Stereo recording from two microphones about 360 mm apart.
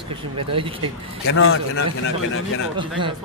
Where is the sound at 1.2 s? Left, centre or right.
Left.